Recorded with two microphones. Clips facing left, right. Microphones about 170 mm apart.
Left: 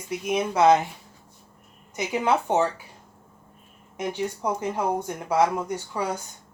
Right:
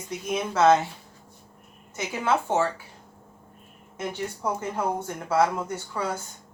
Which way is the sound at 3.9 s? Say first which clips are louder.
Left 3 dB; 15° left (ahead or behind).